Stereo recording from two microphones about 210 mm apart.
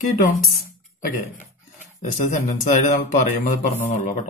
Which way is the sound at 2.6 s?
35° left (ahead or behind).